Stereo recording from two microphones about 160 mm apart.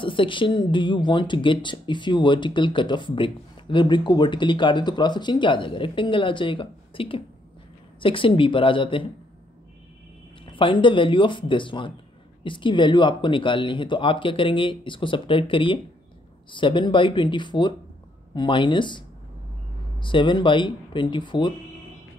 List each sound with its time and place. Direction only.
0.0 s speech: 30° left (ahead or behind)
10.4 s speech: 30° left (ahead or behind)